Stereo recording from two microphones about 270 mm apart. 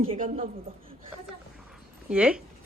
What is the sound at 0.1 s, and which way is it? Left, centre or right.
Speech, right.